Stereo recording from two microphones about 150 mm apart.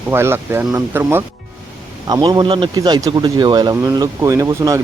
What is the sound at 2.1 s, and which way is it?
Speech, 30° right (ahead or behind).